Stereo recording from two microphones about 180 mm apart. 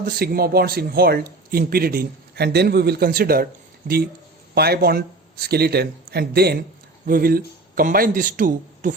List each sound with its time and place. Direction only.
0.0 s speech: 55° right (ahead or behind)